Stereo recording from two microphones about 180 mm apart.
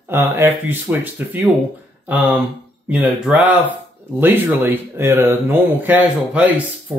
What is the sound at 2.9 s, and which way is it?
Speech, 5° right (ahead or behind).